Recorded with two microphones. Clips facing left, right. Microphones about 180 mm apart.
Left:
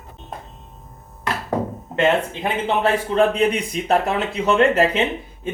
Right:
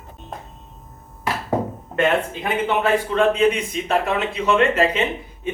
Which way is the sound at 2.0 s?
30° left (ahead or behind).